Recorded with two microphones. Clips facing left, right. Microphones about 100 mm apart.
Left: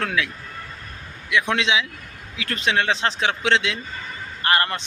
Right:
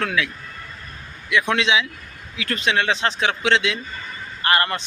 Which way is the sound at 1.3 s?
25° left (ahead or behind).